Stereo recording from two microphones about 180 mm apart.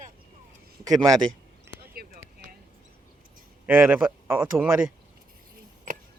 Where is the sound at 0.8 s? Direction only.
20° right (ahead or behind).